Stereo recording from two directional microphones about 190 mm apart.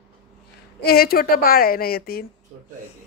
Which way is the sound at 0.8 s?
55° left (ahead or behind).